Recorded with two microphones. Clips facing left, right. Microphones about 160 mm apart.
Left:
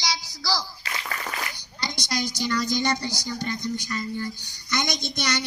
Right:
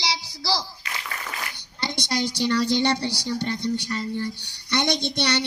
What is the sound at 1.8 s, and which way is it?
Child singing, 25° right (ahead or behind).